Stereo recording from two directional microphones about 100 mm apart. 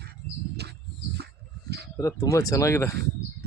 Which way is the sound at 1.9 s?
30° left (ahead or behind).